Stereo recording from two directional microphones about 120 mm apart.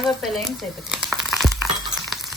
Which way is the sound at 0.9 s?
5° right (ahead or behind).